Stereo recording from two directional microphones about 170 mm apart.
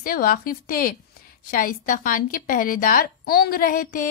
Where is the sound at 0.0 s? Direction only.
60° left (ahead or behind).